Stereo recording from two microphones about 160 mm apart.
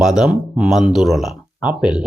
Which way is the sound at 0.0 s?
5° right (ahead or behind).